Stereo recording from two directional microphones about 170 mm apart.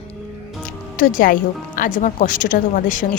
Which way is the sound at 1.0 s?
50° left (ahead or behind).